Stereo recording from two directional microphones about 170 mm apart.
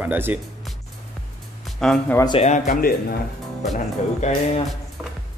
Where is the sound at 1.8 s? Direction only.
5° left (ahead or behind).